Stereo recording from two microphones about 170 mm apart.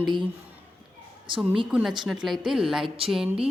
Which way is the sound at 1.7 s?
5° right (ahead or behind).